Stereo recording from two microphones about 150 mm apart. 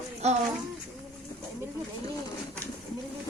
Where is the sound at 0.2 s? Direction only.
45° right (ahead or behind).